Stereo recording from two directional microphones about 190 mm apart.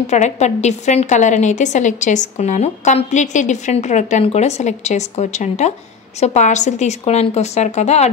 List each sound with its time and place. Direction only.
0.0 s a woman's voice: 35° left (ahead or behind)